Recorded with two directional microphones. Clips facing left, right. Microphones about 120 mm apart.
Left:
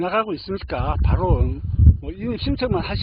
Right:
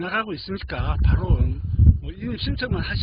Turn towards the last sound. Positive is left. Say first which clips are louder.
# left 6 dB
turn(degrees=50)  # may be behind; listen again after turning